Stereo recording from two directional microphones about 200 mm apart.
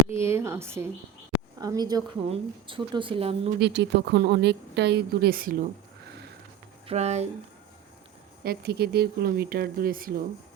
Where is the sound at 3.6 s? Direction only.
60° right (ahead or behind).